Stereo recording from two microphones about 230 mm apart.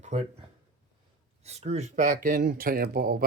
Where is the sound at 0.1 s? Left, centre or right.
Right.